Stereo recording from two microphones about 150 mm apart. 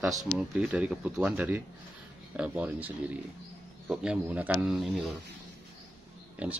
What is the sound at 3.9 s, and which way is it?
Speech, 5° right (ahead or behind).